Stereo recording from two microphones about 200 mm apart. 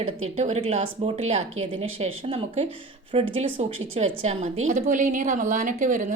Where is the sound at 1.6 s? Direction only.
90° right.